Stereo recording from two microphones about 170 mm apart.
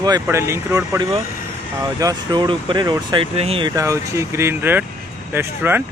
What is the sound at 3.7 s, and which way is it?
Speech, 20° right (ahead or behind).